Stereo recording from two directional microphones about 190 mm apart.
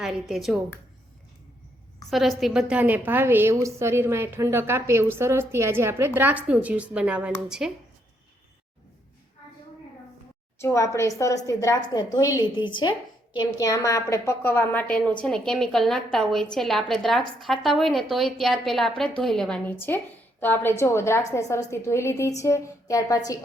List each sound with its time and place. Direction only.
0.0 s a woman's voice: centre (ahead or behind)
2.0 s a woman's voice: centre (ahead or behind)
10.6 s a woman's voice: 15° left (ahead or behind)